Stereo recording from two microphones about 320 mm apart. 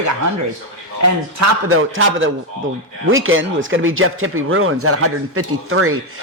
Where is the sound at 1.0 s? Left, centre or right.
Right.